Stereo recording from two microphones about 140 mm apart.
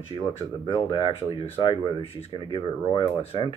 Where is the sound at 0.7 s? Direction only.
35° left (ahead or behind).